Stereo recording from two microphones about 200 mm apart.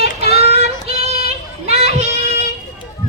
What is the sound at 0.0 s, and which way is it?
Child singing, 30° right (ahead or behind).